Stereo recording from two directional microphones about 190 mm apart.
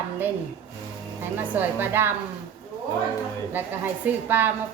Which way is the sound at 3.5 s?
10° right (ahead or behind).